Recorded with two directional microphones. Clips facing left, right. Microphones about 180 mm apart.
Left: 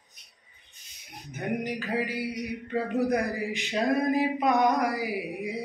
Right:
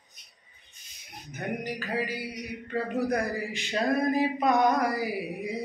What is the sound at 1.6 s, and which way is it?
Mantra, 20° left (ahead or behind).